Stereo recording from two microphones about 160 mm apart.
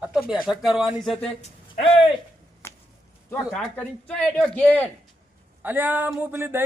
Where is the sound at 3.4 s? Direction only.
Centre (ahead or behind).